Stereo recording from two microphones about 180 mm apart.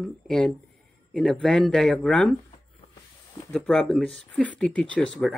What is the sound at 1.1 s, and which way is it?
Speech, 5° left (ahead or behind).